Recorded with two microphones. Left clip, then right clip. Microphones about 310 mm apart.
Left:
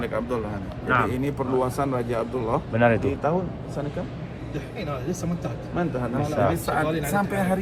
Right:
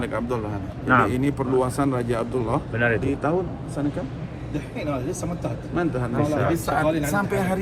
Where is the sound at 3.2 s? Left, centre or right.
Right.